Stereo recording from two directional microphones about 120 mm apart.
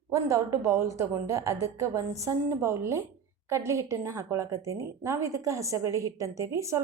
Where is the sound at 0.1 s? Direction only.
25° right (ahead or behind).